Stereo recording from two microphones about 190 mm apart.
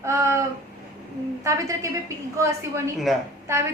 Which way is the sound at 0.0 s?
15° right (ahead or behind).